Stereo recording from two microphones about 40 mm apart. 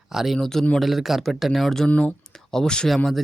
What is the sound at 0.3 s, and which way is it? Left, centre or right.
Speech, centre.